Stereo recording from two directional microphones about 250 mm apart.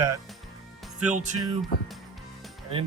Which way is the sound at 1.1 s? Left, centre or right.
Right.